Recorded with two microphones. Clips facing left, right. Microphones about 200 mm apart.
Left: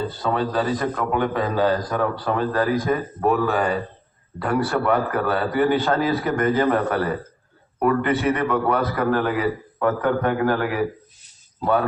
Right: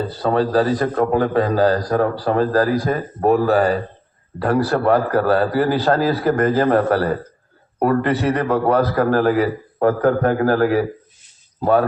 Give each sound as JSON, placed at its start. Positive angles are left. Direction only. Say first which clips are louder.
{"t": 0.1, "sound": "a man's voice", "louder": "right 6 dB", "side_deg": -35}